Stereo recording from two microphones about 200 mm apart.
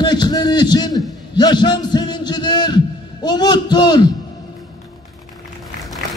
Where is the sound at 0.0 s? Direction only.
20° left (ahead or behind).